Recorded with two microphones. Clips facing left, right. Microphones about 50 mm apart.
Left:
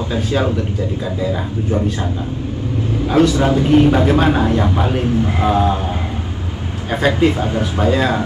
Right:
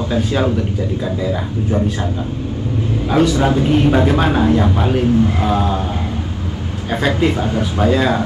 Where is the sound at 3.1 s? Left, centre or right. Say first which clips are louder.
Left 1 dB; centre.